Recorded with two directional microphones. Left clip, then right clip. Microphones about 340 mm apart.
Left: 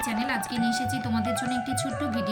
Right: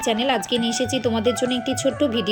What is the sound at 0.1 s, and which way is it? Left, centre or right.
Speech, right.